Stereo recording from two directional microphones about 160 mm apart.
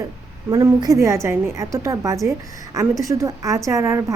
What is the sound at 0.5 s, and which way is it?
A woman's voice, 20° right (ahead or behind).